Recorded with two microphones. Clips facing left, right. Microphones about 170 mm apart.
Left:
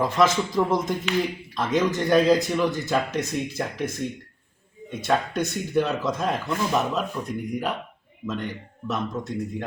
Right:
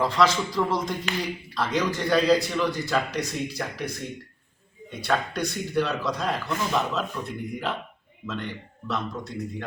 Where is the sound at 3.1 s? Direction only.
50° left (ahead or behind).